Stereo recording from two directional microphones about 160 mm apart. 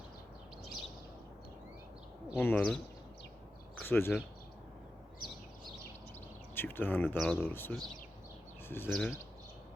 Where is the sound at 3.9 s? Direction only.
15° left (ahead or behind).